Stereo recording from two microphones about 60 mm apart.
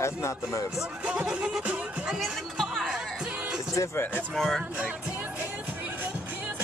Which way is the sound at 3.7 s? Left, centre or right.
Left.